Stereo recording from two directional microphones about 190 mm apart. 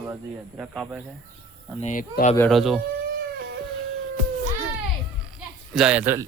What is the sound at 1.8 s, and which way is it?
Speech, 45° left (ahead or behind).